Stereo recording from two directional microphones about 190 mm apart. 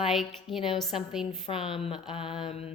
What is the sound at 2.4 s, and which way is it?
Mantra, 30° left (ahead or behind).